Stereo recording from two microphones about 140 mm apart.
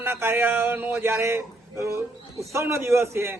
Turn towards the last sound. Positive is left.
turn(degrees=-20)  # may be behind; listen again after turning